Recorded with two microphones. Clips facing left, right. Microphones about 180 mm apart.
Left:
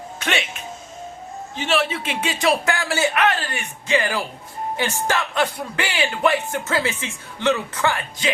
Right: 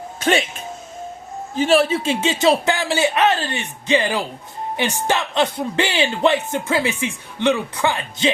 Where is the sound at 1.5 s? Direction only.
35° right (ahead or behind).